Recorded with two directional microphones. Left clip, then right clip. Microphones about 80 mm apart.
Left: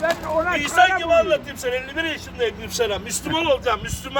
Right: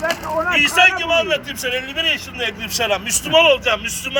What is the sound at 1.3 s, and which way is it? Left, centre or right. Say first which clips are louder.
Speech: right 1 dB; left.